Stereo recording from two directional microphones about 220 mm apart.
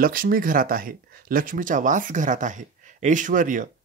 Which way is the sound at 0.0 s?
40° right (ahead or behind).